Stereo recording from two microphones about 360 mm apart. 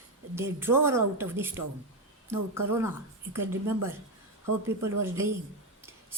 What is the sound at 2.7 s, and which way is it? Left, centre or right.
Speech, centre.